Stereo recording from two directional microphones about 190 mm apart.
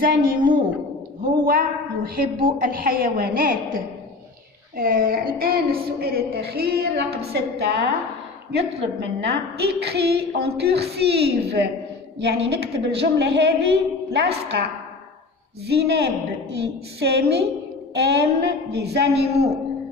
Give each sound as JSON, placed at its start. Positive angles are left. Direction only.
{"t": 0.0, "sound": "a woman's voice", "side_deg": -50}
{"t": 15.6, "sound": "a woman's voice", "side_deg": -60}
{"t": 19.3, "sound": "a man's voice", "side_deg": -35}